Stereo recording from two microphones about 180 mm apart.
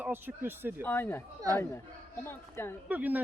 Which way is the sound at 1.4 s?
20° right (ahead or behind).